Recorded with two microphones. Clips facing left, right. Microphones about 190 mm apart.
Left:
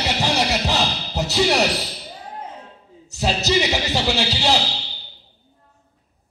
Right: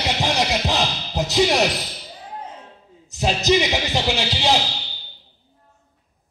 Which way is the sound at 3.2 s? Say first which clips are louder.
Right 2 dB; 15° right (ahead or behind).